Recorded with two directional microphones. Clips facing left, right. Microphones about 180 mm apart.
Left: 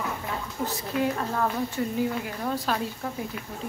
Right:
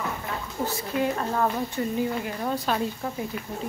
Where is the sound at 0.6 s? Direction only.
25° right (ahead or behind).